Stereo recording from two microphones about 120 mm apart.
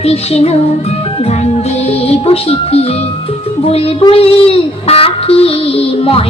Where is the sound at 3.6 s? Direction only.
55° left (ahead or behind).